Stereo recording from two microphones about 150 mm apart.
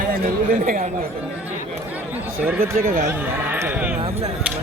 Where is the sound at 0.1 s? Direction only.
70° right (ahead or behind).